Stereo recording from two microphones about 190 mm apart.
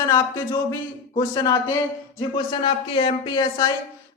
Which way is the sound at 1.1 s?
20° left (ahead or behind).